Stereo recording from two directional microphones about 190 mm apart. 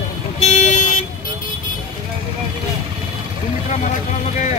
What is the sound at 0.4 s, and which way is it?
Vehicle, 35° left (ahead or behind).